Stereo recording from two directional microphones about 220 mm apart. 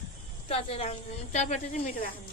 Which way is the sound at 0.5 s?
25° left (ahead or behind).